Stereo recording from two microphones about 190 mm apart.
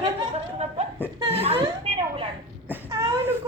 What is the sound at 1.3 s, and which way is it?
Speech, 30° right (ahead or behind).